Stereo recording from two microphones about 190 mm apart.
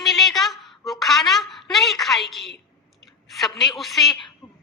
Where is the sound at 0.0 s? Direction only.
Centre (ahead or behind).